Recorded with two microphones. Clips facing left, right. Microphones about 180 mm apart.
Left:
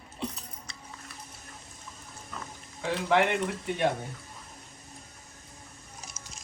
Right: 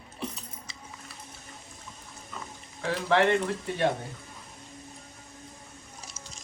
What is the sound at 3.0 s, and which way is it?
Speech, 10° left (ahead or behind).